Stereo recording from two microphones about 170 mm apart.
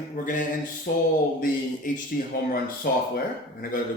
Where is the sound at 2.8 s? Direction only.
65° left (ahead or behind).